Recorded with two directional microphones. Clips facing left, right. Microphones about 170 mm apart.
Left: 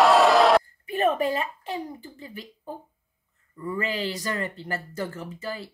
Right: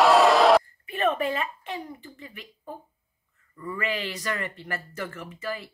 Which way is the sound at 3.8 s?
35° left (ahead or behind).